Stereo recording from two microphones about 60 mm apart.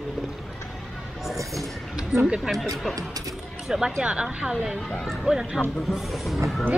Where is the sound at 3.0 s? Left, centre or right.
Right.